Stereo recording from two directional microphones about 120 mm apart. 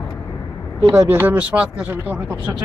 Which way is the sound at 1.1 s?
15° right (ahead or behind).